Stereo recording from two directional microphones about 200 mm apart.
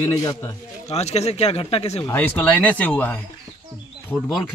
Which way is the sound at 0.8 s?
35° left (ahead or behind).